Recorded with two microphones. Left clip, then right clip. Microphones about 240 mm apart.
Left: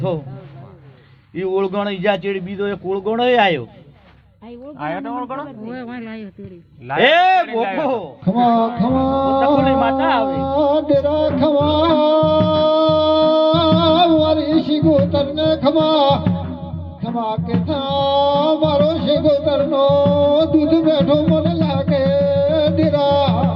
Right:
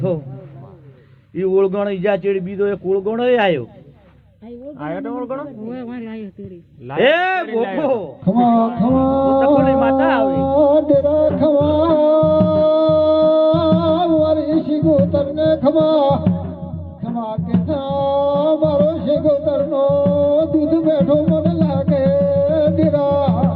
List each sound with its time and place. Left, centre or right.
1.4 s a man's voice: left
4.8 s speech: centre
5.6 s speech: centre
7.0 s a man's voice: left
7.4 s speech: centre
9.0 s music: centre
9.6 s a man's voice: left
10.2 s music: centre
12.2 s music: left
13.1 s music: centre